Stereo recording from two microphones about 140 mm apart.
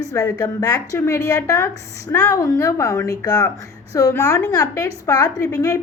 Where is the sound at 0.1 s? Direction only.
25° left (ahead or behind).